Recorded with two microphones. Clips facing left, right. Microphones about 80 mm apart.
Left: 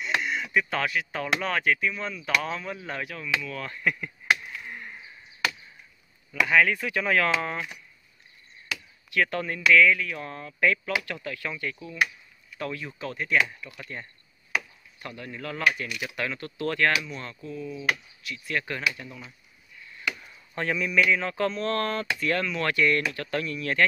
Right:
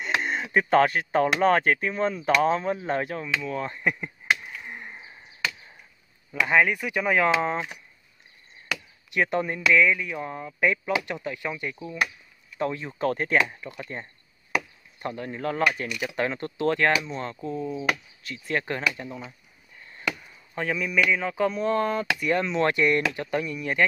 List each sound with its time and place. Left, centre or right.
0.2 s speech: right
4.5 s a sound: centre
6.4 s speech: right
9.1 s speech: right
13.0 s speech: right
13.5 s speech: right
20.5 s speech: centre